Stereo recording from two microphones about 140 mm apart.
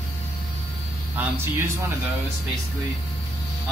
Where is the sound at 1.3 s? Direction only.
15° right (ahead or behind).